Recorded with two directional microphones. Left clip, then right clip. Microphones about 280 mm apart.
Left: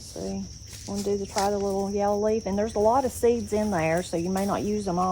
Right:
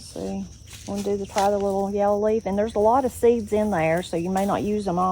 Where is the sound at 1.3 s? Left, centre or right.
Centre.